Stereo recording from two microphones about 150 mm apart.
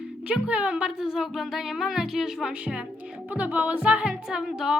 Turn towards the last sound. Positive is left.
turn(degrees=-5)  # may be behind; listen again after turning